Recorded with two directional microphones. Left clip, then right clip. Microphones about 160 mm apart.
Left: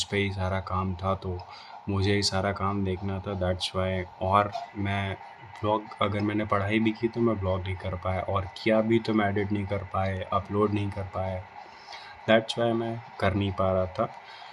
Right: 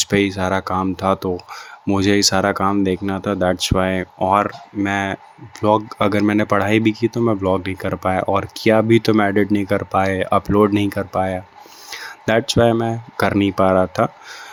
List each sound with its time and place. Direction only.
0.0 s speech: 50° right (ahead or behind)